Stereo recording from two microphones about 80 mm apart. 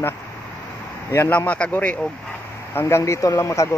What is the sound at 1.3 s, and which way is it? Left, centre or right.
Speech, centre.